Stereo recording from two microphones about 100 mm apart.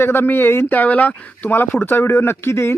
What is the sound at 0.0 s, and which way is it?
Speech, 20° left (ahead or behind).